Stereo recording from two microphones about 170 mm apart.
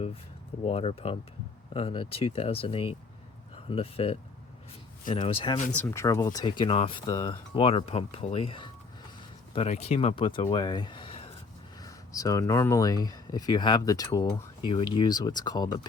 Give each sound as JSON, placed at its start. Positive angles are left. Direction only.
{"t": 0.6, "sound": "speech", "side_deg": 35}
{"t": 5.7, "sound": "speech", "side_deg": 15}
{"t": 11.8, "sound": "speech", "side_deg": 20}